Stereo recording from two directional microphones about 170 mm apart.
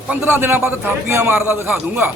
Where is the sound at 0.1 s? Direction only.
10° right (ahead or behind).